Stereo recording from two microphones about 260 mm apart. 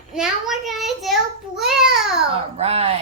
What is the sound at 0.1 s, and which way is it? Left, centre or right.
Child singing, centre.